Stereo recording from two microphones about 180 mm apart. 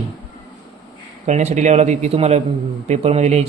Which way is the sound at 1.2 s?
40° right (ahead or behind).